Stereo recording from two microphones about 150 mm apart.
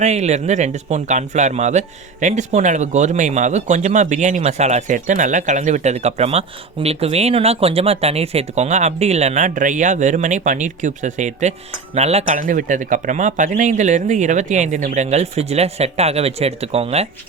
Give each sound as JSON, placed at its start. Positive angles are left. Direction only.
{"t": 0.0, "sound": "a man's voice", "side_deg": -50}